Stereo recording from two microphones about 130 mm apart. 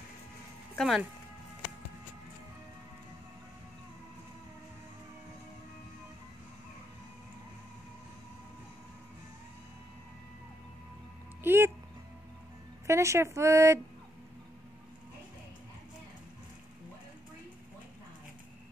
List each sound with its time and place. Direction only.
0.7 s speech: centre (ahead or behind)
11.4 s music: 15° right (ahead or behind)
12.8 s speech: 20° right (ahead or behind)